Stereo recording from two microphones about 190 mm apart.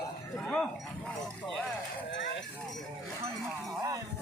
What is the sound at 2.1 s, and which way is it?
Clip-clop, 70° left (ahead or behind).